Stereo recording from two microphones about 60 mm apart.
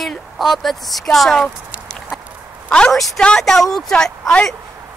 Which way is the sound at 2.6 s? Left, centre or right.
Centre.